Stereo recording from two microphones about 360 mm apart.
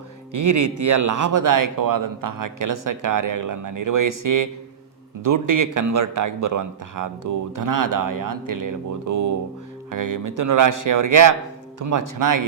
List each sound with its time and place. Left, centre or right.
0.3 s speech: right